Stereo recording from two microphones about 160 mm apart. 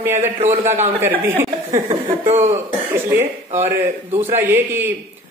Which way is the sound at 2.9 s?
15° right (ahead or behind).